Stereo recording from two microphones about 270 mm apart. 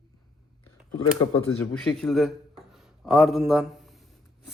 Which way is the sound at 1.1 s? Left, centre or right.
Centre.